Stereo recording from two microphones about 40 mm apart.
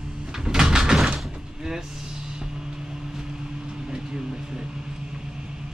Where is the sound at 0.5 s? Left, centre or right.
Centre.